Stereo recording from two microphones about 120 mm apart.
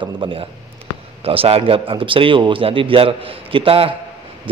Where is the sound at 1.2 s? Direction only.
55° right (ahead or behind).